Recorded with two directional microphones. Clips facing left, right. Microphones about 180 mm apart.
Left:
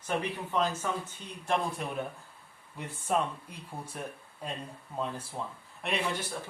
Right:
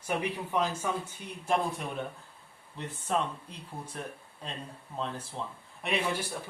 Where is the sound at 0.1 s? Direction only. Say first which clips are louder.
Right 1 dB; 10° right (ahead or behind).